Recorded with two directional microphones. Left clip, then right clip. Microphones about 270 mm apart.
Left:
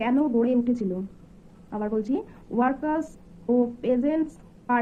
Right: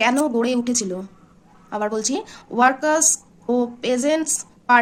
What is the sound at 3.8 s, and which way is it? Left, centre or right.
Speech, centre.